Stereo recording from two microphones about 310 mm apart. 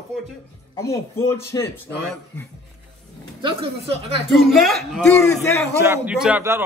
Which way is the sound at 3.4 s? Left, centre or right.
Centre.